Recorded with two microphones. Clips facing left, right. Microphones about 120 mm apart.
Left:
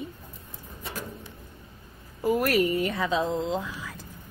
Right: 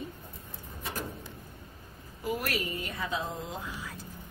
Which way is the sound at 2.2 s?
40° left (ahead or behind).